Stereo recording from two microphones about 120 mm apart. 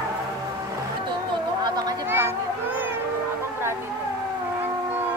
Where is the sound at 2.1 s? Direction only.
20° right (ahead or behind).